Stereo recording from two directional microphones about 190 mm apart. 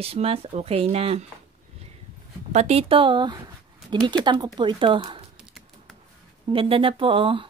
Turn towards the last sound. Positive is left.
turn(degrees=-25)  # may be behind; listen again after turning